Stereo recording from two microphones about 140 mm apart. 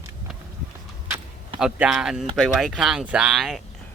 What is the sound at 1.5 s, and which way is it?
Speech, 5° right (ahead or behind).